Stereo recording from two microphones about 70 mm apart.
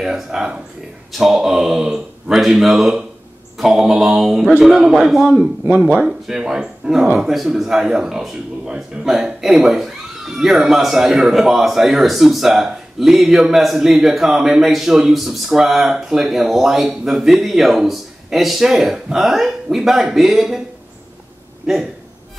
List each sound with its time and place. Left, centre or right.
0.0 s speech: centre
5.9 s speech: centre